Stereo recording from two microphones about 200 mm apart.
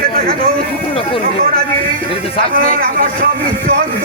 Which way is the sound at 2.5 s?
45° right (ahead or behind).